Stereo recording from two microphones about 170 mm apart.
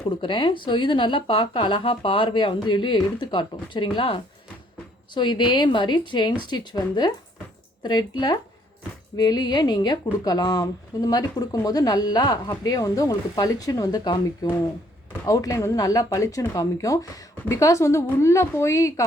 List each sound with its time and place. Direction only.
0.2 s a woman's voice: 30° left (ahead or behind)